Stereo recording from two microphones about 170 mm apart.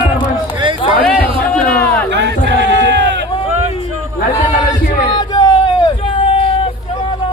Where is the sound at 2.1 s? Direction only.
90° right.